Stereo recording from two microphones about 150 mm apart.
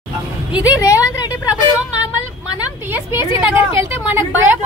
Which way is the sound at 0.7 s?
20° left (ahead or behind).